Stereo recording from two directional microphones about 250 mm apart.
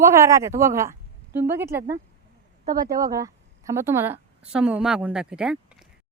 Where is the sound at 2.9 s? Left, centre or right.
Centre.